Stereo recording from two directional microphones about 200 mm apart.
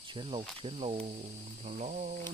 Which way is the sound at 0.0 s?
25° right (ahead or behind).